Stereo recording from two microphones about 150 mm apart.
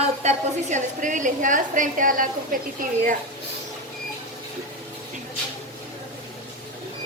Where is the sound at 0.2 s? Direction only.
50° right (ahead or behind); by 2.6 s 65° right (ahead or behind).